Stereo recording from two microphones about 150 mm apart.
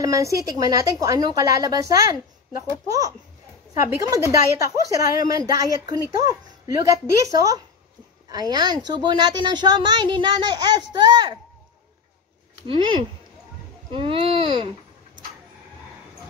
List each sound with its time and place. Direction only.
0.0 s a woman's voice: 20° right (ahead or behind)
12.6 s speech: 30° right (ahead or behind)